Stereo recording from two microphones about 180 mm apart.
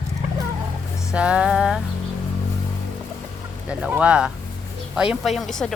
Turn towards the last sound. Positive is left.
turn(degrees=0)  # may be behind; listen again after turning